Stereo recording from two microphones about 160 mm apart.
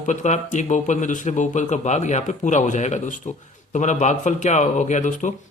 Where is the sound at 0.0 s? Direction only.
50° left (ahead or behind).